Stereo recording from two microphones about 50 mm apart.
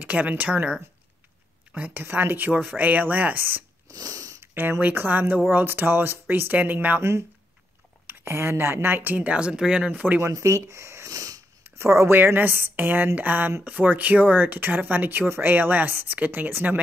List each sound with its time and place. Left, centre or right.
0.0 s speech: right
2.0 s speech: right
2.7 s speech: right
4.7 s speech: right
7.0 s speech: right
9.1 s speech: right
9.8 s speech: right
10.2 s speech: right
11.8 s speech: right